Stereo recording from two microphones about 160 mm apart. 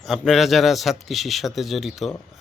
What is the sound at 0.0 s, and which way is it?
A man's voice, centre (ahead or behind).